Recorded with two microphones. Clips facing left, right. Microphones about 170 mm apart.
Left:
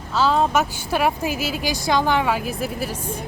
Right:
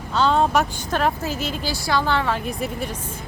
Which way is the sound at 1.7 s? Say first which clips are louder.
Left 2 dB; 20° left (ahead or behind).